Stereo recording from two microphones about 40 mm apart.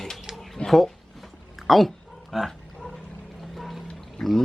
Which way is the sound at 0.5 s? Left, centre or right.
Centre.